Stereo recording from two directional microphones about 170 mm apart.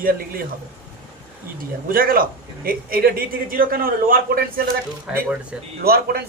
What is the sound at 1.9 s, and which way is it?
A man's voice, 55° right (ahead or behind).